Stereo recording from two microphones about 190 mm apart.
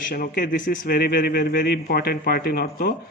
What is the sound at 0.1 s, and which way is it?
A man's voice, 50° left (ahead or behind).